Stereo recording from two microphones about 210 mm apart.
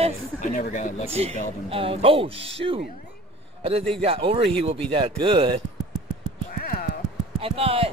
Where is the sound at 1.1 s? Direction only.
25° right (ahead or behind).